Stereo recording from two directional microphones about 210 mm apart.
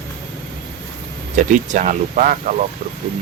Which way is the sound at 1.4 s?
35° right (ahead or behind).